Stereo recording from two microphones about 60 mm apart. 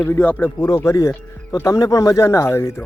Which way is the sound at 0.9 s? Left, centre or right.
Left.